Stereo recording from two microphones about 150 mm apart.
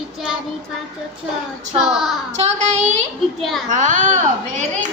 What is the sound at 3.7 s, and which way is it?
Speech, 55° right (ahead or behind).